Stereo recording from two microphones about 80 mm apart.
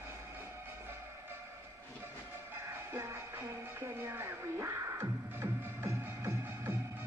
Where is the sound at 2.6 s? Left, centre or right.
Right.